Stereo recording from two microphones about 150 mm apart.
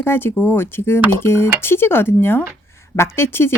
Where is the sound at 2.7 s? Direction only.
15° left (ahead or behind).